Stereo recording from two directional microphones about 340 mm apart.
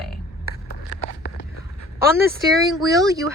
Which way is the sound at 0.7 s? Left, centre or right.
Left.